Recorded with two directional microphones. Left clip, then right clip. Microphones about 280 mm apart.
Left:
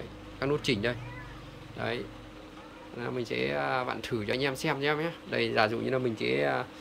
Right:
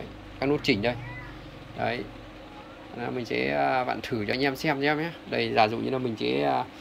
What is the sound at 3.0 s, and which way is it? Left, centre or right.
Speech, centre.